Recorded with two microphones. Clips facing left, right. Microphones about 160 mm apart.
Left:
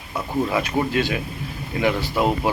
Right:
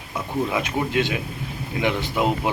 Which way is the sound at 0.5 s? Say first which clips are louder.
Left 2 dB; 20° right (ahead or behind).